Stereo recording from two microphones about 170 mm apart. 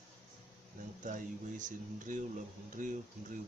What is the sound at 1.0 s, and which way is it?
Speech, 50° right (ahead or behind).